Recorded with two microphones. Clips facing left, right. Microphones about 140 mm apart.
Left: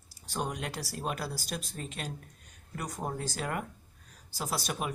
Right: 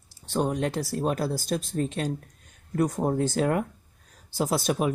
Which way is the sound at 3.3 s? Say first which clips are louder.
Right 10 dB; 50° right (ahead or behind).